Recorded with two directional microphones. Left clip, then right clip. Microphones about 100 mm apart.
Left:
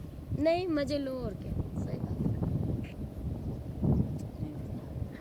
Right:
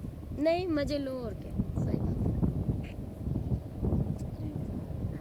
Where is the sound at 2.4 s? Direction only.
70° right (ahead or behind).